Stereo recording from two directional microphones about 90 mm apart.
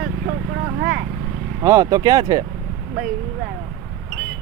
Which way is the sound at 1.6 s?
35° right (ahead or behind).